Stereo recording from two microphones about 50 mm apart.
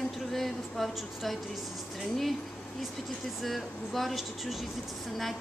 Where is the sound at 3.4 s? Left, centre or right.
Centre.